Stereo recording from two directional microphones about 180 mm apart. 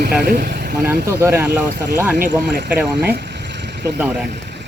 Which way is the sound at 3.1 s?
70° right (ahead or behind).